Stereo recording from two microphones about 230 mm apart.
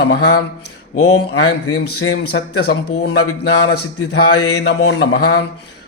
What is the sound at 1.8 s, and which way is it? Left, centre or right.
Speech, left.